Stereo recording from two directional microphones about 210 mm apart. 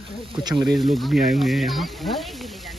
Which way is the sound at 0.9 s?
Centre (ahead or behind).